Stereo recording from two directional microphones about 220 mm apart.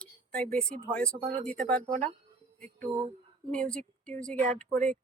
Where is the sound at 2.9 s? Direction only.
15° right (ahead or behind).